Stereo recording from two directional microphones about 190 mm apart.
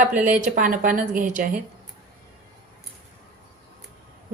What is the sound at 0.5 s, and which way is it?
Speech, 45° right (ahead or behind).